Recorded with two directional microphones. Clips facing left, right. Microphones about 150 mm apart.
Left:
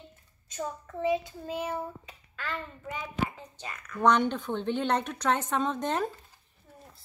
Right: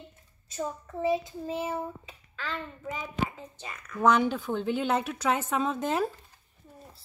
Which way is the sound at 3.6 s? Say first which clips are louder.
Even; 5° right (ahead or behind).